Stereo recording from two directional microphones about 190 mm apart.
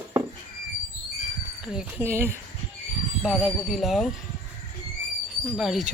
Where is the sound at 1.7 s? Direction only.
15° right (ahead or behind).